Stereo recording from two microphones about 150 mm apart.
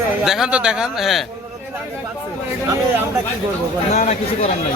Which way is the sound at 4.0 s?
50° left (ahead or behind).